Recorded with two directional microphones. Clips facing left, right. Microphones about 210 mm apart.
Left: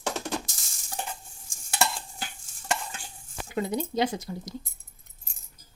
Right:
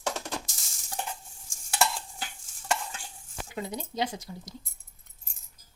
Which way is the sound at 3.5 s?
60° left (ahead or behind).